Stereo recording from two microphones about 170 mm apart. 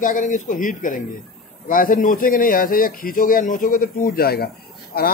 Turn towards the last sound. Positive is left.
turn(degrees=65)  # may be behind; listen again after turning